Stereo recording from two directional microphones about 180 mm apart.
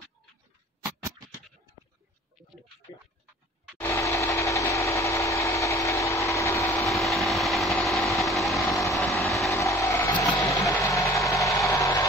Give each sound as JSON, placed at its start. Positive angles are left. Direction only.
{"t": 0.8, "sound": "a sound", "side_deg": -15}
{"t": 3.8, "sound": "engine", "side_deg": 15}
{"t": 6.9, "sound": "a sound", "side_deg": 0}
{"t": 8.3, "sound": "vehicle", "side_deg": 0}
{"t": 9.5, "sound": "vehicle", "side_deg": 15}
{"t": 10.4, "sound": "music", "side_deg": 20}